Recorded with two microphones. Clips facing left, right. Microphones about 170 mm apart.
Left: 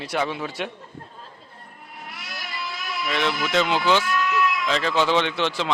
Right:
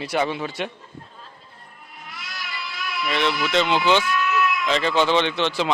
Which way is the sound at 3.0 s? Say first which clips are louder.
Right 2 dB; centre (ahead or behind).